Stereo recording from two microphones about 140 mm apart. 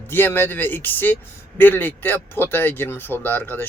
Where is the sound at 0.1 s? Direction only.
15° left (ahead or behind).